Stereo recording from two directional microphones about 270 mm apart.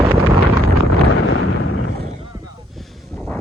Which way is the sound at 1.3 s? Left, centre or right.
Left.